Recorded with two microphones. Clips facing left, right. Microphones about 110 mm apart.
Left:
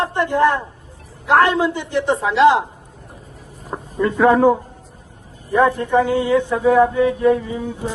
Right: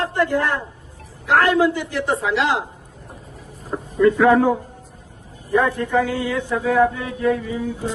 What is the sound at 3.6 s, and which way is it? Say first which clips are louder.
Speech: right 4 dB; 30° left (ahead or behind).